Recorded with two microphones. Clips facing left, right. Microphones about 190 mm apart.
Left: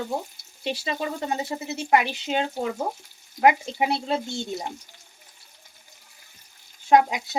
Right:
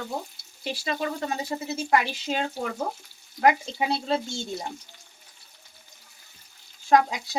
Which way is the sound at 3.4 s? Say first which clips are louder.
Left 2 dB; 20° left (ahead or behind).